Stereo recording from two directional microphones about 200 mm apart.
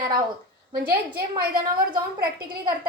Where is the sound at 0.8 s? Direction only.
50° right (ahead or behind).